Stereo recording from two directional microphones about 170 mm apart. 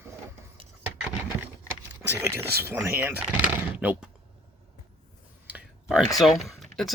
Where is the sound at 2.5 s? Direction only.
65° right (ahead or behind).